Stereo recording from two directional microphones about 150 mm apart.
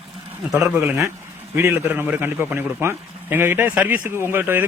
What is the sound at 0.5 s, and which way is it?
A man's voice, 5° right (ahead or behind).